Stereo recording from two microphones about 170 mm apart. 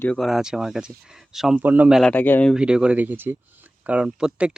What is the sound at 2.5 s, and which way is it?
Speech, 5° right (ahead or behind).